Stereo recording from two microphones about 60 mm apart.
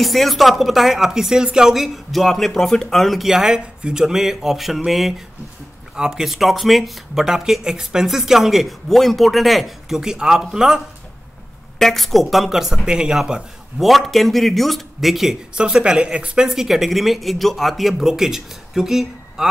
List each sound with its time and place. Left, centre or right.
0.0 s speech: centre
11.8 s speech: centre
16.4 s speech: centre